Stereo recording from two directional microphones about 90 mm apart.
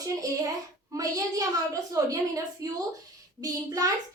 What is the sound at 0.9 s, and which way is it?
A woman's voice, 40° right (ahead or behind).